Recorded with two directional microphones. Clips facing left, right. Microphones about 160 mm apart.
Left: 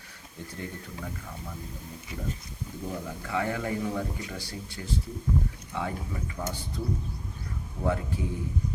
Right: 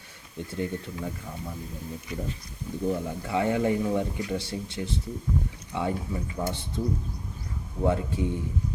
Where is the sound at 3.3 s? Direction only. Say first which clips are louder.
Right 5 dB; 25° right (ahead or behind).